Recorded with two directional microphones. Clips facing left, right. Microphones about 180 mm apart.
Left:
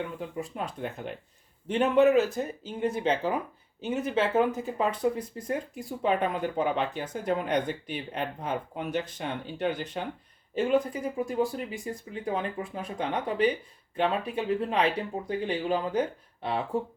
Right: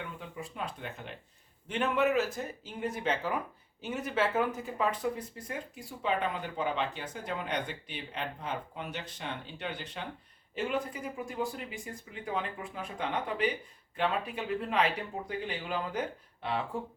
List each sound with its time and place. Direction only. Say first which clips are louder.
0.2 s speech: left 6 dB; 40° left (ahead or behind)
5.5 s speech: left 11 dB; 45° left (ahead or behind)